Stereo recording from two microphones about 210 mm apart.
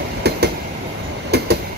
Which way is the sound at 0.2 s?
50° right (ahead or behind).